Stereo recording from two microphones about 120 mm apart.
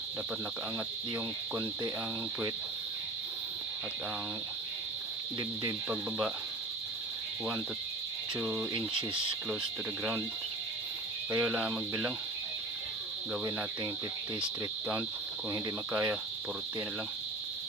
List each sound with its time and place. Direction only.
5.4 s speech: 20° right (ahead or behind)
8.4 s speech: 15° right (ahead or behind)
8.7 s speech: 45° right (ahead or behind)
11.3 s speech: 5° right (ahead or behind)
15.9 s speech: 10° right (ahead or behind)